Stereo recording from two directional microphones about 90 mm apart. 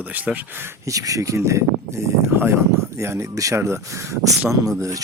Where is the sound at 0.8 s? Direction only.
40° right (ahead or behind).